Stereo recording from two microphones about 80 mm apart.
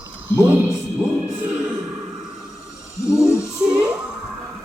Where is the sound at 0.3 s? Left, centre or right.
Right.